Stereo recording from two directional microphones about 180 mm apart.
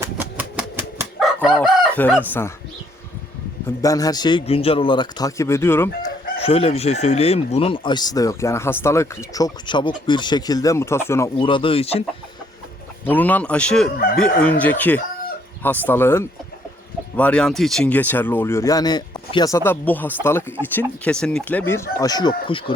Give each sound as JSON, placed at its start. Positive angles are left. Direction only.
{"t": 0.0, "sound": "typewriter", "side_deg": -15}
{"t": 1.2, "sound": "chicken", "side_deg": 0}
{"t": 2.0, "sound": "speech", "side_deg": 10}
{"t": 3.8, "sound": "speech", "side_deg": 20}
{"t": 6.4, "sound": "speech", "side_deg": 35}
{"t": 11.3, "sound": "speech", "side_deg": 25}
{"t": 13.1, "sound": "speech", "side_deg": 10}